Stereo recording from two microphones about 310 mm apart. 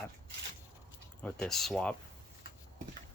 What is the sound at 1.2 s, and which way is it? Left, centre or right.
Speech, centre.